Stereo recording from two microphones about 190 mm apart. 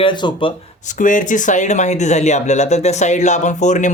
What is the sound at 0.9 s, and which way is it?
Speech, 40° left (ahead or behind).